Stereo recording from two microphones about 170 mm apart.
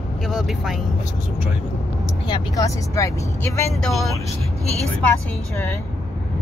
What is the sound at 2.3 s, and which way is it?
Speech, 25° left (ahead or behind).